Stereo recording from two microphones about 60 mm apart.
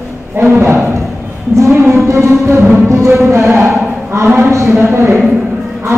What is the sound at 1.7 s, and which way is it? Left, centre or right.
Music, right.